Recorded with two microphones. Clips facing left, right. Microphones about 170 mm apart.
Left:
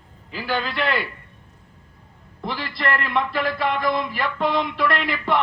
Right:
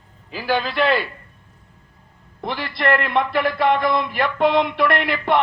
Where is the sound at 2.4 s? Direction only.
60° right (ahead or behind).